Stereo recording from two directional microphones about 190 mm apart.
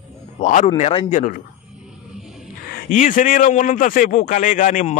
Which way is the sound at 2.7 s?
45° left (ahead or behind).